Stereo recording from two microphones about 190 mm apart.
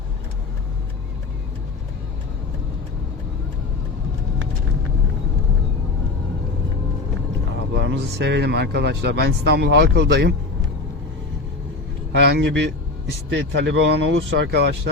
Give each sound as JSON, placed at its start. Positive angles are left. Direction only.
{"t": 7.8, "sound": "speech", "side_deg": -65}
{"t": 12.1, "sound": "speech", "side_deg": -60}